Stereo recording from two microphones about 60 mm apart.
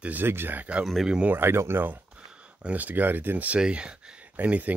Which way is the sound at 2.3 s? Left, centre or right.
Centre.